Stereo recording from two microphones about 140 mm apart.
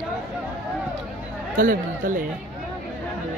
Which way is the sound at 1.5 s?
80° right.